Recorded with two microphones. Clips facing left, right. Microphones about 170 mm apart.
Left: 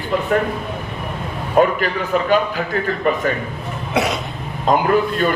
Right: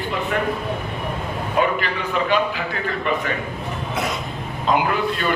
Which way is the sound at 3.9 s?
75° left (ahead or behind).